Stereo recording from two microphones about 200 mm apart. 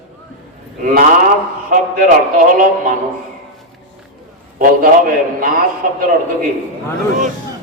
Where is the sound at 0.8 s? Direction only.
45° right (ahead or behind).